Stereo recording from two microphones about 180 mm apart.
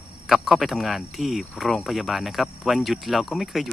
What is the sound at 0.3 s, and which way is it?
Speech, centre (ahead or behind).